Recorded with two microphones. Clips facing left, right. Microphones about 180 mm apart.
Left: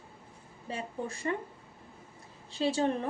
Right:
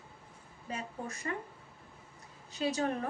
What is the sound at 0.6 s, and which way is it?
Speech, 30° left (ahead or behind).